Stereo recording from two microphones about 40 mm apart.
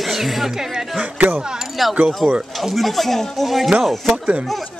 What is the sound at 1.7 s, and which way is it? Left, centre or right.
A man's voice, centre.